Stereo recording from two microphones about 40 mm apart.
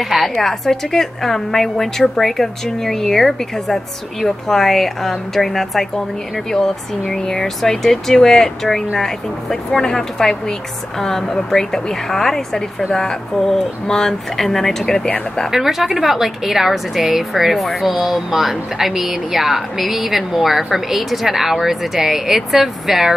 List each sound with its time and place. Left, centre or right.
0.4 s a woman's voice: centre
15.0 s speech: left
15.5 s speech: centre